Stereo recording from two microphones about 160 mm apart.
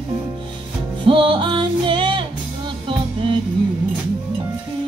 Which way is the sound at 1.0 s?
30° right (ahead or behind).